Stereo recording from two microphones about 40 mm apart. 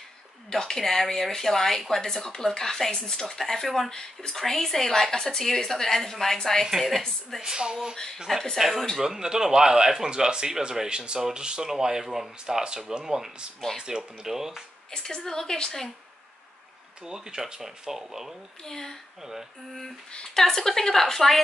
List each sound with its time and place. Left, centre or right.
0.5 s a woman's voice: centre
3.9 s a woman's voice: centre
6.6 s a woman's voice: centre
7.4 s speech: centre
8.5 s a woman's voice: centre
8.9 s speech: centre
14.9 s a woman's voice: centre
17.0 s speech: centre
18.7 s a woman's voice: centre
20.3 s a woman's voice: centre